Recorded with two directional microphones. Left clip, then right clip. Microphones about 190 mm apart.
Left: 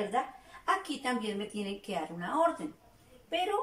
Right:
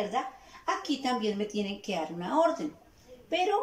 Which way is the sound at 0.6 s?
15° right (ahead or behind).